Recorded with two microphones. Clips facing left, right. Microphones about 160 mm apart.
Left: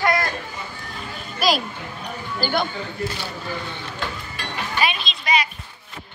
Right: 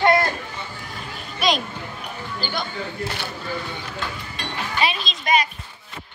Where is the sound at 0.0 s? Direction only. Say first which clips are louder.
Right 4 dB; 25° right (ahead or behind).